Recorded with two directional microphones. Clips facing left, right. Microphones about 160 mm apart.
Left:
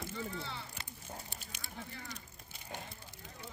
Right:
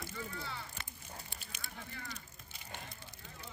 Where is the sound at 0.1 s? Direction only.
25° left (ahead or behind).